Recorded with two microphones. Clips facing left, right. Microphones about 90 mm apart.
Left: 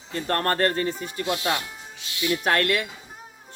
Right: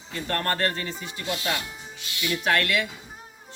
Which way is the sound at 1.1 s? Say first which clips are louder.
Left 2 dB; 25° left (ahead or behind).